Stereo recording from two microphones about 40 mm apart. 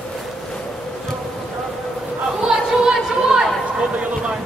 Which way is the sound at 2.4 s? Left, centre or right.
Centre.